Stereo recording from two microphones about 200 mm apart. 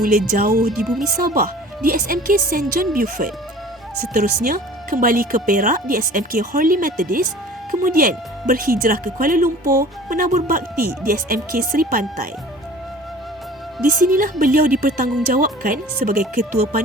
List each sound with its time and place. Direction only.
0.0 s speech: 45° right (ahead or behind)
0.7 s speech: centre (ahead or behind)
1.1 s speech: 45° right (ahead or behind)
14.1 s speech: 45° right (ahead or behind)